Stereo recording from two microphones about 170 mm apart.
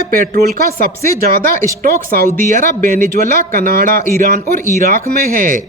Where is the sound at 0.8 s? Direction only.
60° right (ahead or behind).